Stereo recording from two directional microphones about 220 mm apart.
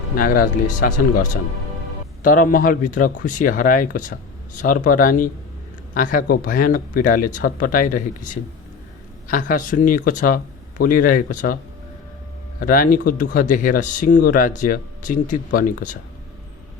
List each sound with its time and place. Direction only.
0.2 s speech: 40° left (ahead or behind)
2.2 s speech: 40° left (ahead or behind)
12.5 s speech: 40° left (ahead or behind)